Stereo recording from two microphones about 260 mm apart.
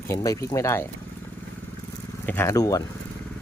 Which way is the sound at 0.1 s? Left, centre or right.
Centre.